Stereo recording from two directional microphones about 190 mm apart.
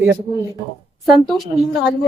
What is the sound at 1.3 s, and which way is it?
Speech, centre (ahead or behind).